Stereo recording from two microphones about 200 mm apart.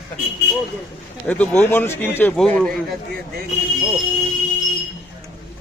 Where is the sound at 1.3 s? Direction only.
5° left (ahead or behind).